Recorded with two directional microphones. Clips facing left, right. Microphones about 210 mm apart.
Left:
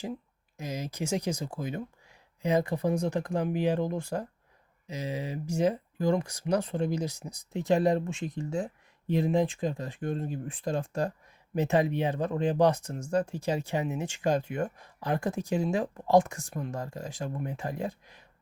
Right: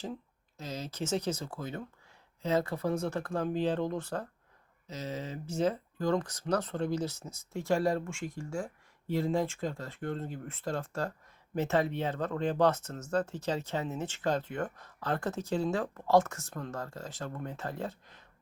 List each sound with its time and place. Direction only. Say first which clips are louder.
0.0 s speech: left 3 dB; 15° left (ahead or behind)